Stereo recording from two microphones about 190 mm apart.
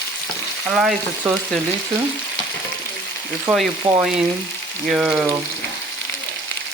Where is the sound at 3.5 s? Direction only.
5° right (ahead or behind).